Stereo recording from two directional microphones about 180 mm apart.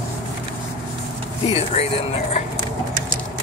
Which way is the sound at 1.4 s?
35° left (ahead or behind).